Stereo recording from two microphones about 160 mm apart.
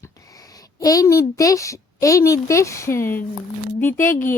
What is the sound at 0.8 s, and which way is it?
Speech, 20° left (ahead or behind).